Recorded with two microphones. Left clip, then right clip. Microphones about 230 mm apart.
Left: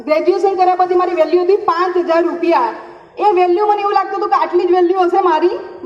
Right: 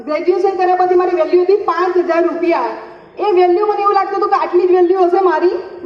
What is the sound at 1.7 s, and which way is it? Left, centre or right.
A woman's voice, left.